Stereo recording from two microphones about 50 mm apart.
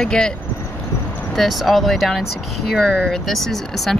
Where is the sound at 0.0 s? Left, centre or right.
Centre.